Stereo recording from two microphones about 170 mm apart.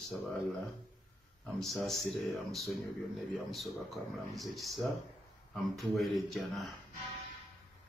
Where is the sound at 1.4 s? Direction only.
Centre (ahead or behind).